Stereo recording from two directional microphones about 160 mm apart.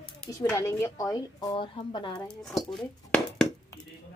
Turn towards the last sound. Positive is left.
turn(degrees=5)  # may be behind; listen again after turning